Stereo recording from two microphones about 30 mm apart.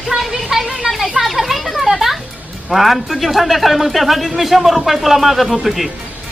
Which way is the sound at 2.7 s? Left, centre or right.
Centre.